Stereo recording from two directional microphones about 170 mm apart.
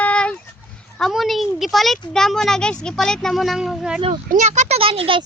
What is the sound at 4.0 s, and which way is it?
Speech, 40° right (ahead or behind).